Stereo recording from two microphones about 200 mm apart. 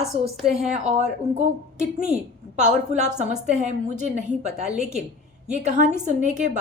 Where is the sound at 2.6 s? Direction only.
35° right (ahead or behind).